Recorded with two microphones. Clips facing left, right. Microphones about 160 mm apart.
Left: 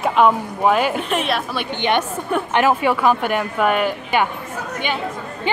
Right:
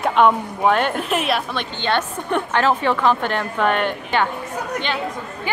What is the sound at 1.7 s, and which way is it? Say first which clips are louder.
Speech: left 3 dB; 15° left (ahead or behind).